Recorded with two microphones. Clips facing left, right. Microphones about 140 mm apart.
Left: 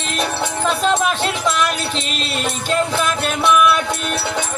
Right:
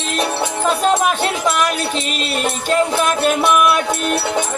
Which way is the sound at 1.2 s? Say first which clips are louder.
Right 2 dB; 45° right (ahead or behind).